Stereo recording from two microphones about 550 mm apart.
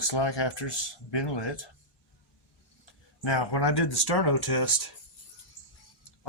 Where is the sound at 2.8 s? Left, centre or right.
Left.